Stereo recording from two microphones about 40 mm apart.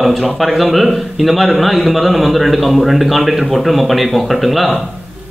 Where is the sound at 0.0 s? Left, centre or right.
Centre.